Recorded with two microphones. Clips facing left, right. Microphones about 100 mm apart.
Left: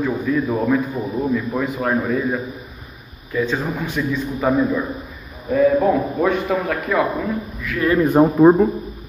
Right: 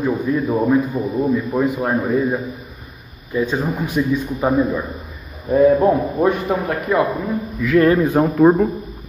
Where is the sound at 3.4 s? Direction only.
15° right (ahead or behind).